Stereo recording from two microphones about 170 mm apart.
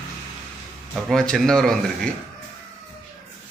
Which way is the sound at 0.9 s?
Centre (ahead or behind).